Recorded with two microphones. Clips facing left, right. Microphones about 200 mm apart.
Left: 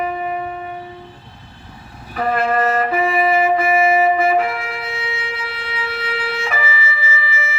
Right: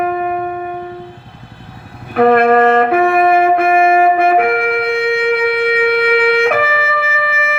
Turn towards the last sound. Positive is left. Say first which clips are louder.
# right 6 dB
turn(degrees=-55)  # may be behind; listen again after turning